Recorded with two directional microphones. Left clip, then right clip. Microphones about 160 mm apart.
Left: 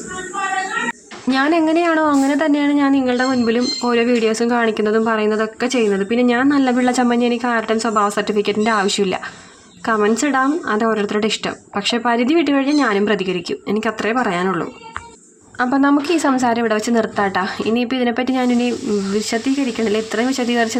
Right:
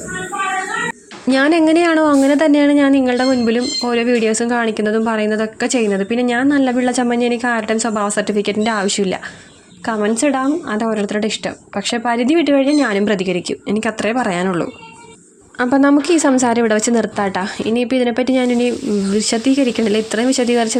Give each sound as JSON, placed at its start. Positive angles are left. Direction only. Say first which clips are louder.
{"t": 1.3, "sound": "speech", "louder": "right 3 dB", "side_deg": -50}